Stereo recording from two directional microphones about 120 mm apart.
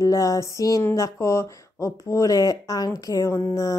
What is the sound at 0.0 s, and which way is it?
Speech, 30° left (ahead or behind).